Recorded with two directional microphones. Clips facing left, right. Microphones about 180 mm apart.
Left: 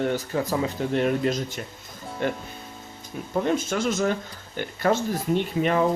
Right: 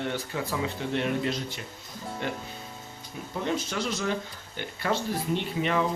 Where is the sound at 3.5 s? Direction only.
50° left (ahead or behind).